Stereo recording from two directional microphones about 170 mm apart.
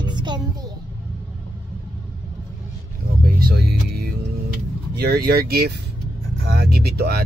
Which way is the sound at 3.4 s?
70° right (ahead or behind).